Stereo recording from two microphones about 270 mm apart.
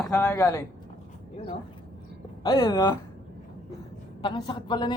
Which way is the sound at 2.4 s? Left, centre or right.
Centre.